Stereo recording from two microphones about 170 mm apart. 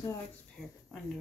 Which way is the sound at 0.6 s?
Centre (ahead or behind).